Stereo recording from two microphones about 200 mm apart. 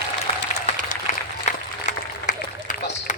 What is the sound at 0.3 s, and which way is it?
Applause, 30° left (ahead or behind).